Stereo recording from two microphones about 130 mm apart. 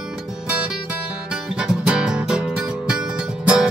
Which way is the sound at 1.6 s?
5° right (ahead or behind).